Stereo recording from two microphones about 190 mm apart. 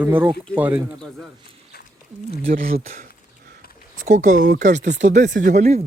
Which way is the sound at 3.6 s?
55° left (ahead or behind).